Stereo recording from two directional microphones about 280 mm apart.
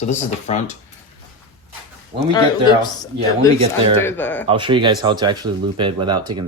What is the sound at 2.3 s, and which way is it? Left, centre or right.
Speech, centre.